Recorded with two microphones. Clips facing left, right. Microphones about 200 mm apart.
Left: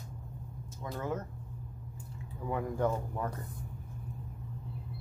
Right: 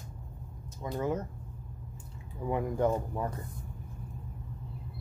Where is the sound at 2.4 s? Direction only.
15° right (ahead or behind).